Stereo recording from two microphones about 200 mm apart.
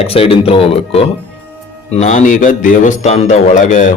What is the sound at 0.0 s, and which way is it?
A man's voice, 30° left (ahead or behind).